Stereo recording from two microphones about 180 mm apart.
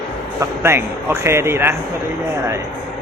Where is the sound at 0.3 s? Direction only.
15° right (ahead or behind).